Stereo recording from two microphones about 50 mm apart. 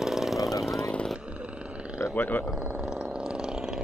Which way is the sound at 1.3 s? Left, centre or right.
Right.